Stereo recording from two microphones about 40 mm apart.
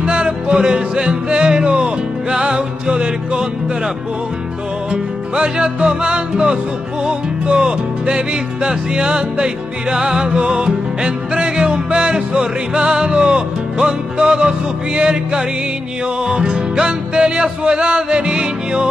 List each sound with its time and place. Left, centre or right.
0.0 s music: right
4.9 s music: right